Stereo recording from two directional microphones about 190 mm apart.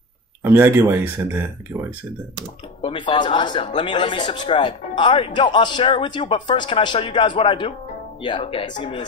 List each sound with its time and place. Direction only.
0.4 s speech: 10° right (ahead or behind)
2.8 s a man's voice: 25° left (ahead or behind)